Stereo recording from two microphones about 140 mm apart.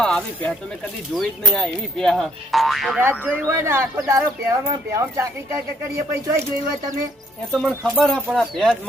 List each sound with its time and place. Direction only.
0.0 s speech: 5° left (ahead or behind)
3.0 s speech: 15° right (ahead or behind)
7.7 s speech: 5° left (ahead or behind)